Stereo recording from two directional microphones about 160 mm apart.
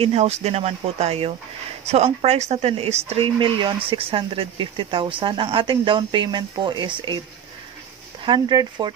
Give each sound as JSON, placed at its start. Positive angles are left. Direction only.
{"t": 0.0, "sound": "speech", "side_deg": -40}
{"t": 8.3, "sound": "speech", "side_deg": -30}